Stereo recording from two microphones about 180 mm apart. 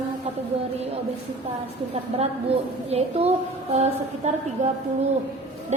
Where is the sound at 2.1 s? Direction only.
35° right (ahead or behind).